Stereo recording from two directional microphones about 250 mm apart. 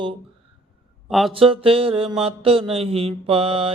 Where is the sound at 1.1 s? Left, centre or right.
Centre.